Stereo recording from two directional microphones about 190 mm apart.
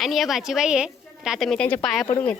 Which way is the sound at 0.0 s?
Centre (ahead or behind).